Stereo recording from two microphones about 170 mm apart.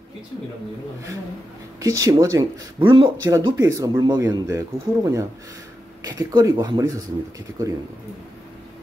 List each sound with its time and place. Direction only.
1.8 s speech: 20° right (ahead or behind)
2.8 s speech: 30° right (ahead or behind)
3.3 s speech: 15° right (ahead or behind)